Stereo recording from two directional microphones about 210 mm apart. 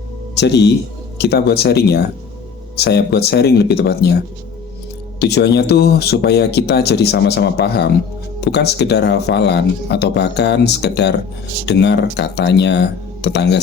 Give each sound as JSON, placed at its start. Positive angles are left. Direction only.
{"t": 0.3, "sound": "speech", "side_deg": 55}
{"t": 5.2, "sound": "speech", "side_deg": 55}